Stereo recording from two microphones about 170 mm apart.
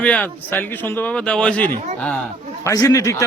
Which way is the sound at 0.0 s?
10° left (ahead or behind).